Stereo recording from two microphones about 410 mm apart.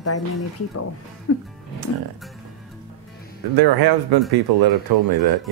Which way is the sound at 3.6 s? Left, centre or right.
Right.